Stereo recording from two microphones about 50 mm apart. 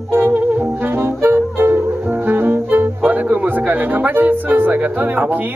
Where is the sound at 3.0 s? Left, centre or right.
Right.